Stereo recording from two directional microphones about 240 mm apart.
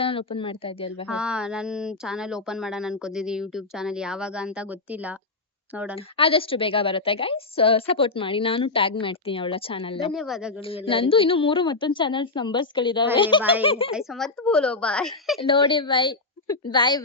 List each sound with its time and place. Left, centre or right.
0.0 s a woman's voice: left
1.0 s speech: centre
6.1 s a woman's voice: left
10.1 s speech: centre
10.7 s a woman's voice: left
13.9 s speech: centre
15.4 s a woman's voice: left